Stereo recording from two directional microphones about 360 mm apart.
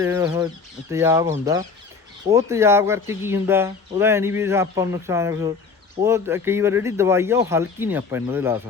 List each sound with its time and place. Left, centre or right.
0.0 s speech: centre